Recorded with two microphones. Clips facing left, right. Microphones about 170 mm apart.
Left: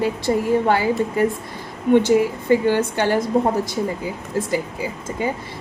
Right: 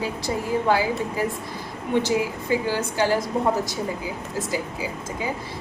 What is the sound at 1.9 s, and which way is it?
A woman's voice, 55° left (ahead or behind).